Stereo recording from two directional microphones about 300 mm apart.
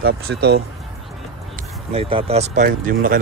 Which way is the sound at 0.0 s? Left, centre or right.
Right.